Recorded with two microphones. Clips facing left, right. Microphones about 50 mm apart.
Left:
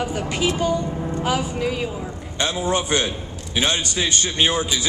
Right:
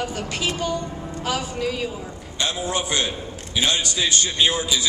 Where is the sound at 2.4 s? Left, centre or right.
Left.